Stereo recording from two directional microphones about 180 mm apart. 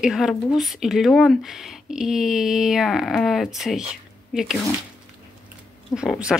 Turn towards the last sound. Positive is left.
turn(degrees=-5)  # may be behind; listen again after turning